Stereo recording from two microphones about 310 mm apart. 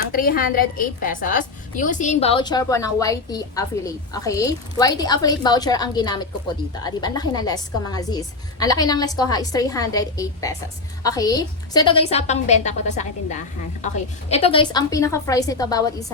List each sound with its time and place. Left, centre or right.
0.1 s a woman's voice: left; by 16.0 s centre